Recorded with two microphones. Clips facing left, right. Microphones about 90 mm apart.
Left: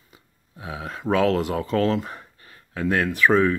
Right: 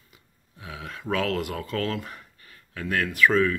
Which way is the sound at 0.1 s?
25° left (ahead or behind).